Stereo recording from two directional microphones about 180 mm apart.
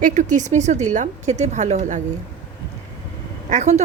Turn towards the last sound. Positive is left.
turn(degrees=-40)  # may be behind; listen again after turning